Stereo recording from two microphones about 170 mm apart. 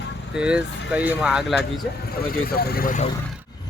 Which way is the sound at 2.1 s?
60° left (ahead or behind).